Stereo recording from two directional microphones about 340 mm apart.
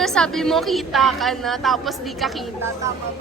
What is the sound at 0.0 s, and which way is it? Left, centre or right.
A woman's voice, centre.